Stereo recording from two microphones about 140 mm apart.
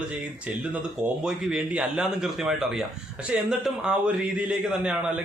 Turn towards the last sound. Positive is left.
turn(degrees=-10)  # may be behind; listen again after turning